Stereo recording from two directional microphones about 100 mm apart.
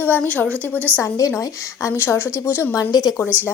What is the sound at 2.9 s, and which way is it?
Speech, 45° left (ahead or behind).